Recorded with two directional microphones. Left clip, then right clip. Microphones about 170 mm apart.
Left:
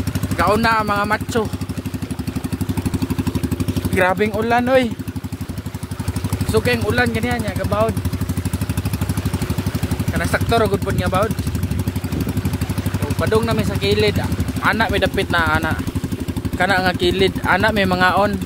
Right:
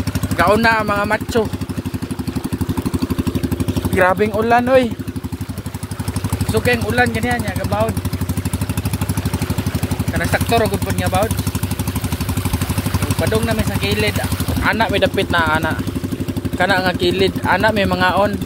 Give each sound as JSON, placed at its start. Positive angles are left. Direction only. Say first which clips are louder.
{"t": 0.4, "sound": "speech", "louder": "right 2 dB", "side_deg": 5}
{"t": 3.9, "sound": "speech", "louder": "right 2 dB", "side_deg": 10}
{"t": 6.5, "sound": "speech", "louder": "right 1 dB", "side_deg": 20}
{"t": 10.1, "sound": "speech", "louder": "right 1 dB", "side_deg": 15}
{"t": 13.3, "sound": "speech", "louder": "left 4 dB", "side_deg": 20}